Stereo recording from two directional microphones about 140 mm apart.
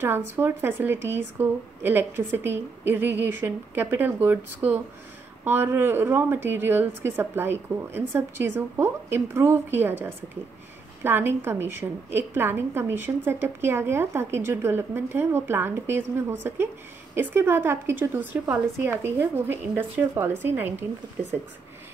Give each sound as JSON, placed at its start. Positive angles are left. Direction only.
{"t": 0.0, "sound": "a woman's voice", "side_deg": -15}